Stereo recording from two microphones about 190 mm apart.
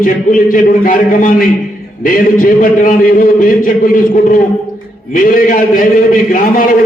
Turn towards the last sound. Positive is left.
turn(degrees=45)  # may be behind; listen again after turning